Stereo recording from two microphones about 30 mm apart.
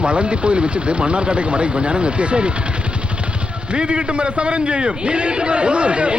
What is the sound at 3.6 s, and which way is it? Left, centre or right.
Speech, right.